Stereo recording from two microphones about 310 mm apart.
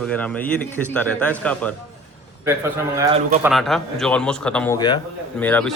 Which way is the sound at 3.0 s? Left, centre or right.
Centre.